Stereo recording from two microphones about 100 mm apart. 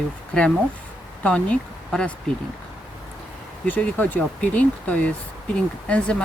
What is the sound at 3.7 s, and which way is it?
Speech, 15° left (ahead or behind).